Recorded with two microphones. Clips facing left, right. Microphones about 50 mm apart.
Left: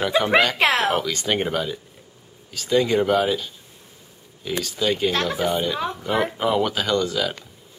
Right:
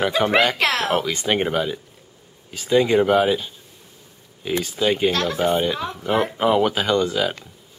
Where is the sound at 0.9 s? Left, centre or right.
Centre.